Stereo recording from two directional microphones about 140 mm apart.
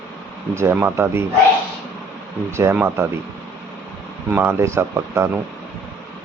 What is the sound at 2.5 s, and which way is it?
Speech, 20° right (ahead or behind).